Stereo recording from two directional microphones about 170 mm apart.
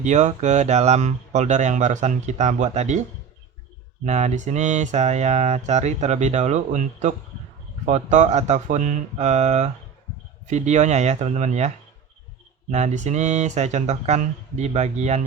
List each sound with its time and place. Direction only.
0.0 s speech: 45° right (ahead or behind)
4.0 s speech: 40° right (ahead or behind)
12.7 s speech: 40° right (ahead or behind)